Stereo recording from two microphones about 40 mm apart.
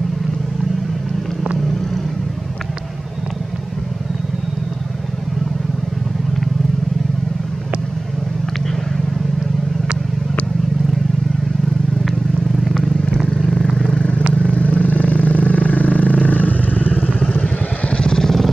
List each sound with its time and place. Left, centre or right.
12.6 s vehicle: centre
13.9 s vehicle: left
16.8 s vehicle: right
17.2 s vehicle: left
18.1 s vehicle: centre